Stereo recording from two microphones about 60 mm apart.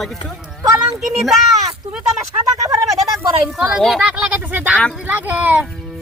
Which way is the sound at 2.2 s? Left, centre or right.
Right.